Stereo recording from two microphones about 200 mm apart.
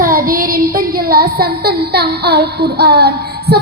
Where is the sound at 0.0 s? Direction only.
45° right (ahead or behind).